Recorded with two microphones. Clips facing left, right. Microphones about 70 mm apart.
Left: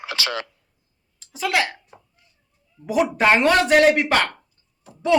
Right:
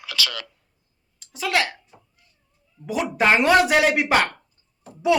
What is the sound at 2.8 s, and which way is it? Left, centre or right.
Speech, centre.